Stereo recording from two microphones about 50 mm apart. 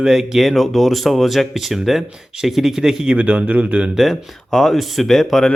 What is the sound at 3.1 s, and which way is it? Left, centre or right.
Speech, right.